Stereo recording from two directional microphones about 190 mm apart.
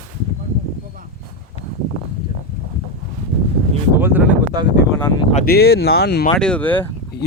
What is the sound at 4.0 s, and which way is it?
Speech, 10° right (ahead or behind).